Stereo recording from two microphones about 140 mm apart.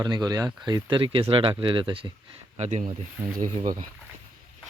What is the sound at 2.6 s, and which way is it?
Speech, 55° right (ahead or behind).